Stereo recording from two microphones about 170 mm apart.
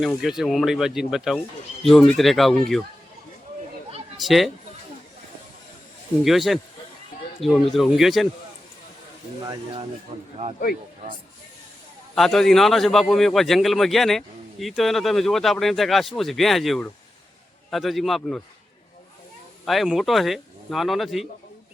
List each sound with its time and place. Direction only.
0.0 s a man's voice: centre (ahead or behind)
4.2 s a man's voice: centre (ahead or behind)
6.2 s a man's voice: centre (ahead or behind)
7.7 s a man's voice: centre (ahead or behind)
9.4 s speech: 25° right (ahead or behind)
10.1 s a man's voice: 35° right (ahead or behind)
12.1 s a man's voice: centre (ahead or behind)
19.6 s a man's voice: centre (ahead or behind)